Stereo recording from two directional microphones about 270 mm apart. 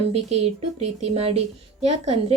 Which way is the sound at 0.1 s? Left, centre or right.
Right.